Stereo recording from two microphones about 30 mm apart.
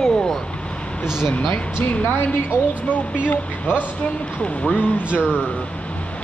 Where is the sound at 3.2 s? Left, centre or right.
Left.